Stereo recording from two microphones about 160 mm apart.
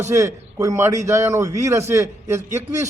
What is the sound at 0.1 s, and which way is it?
A man's voice, 20° right (ahead or behind).